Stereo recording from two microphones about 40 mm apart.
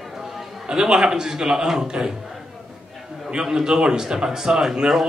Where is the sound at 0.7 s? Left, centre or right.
Centre.